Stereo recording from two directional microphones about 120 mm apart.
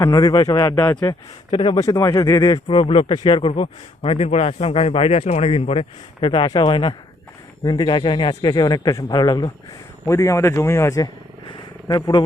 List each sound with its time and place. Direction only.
0.0 s speech: 30° left (ahead or behind)
1.5 s speech: 40° left (ahead or behind)
1.8 s a man's voice: 30° left (ahead or behind)
2.6 s speech: 50° left (ahead or behind)
10.1 s a man's voice: 25° left (ahead or behind)
11.4 s a sound: 35° left (ahead or behind)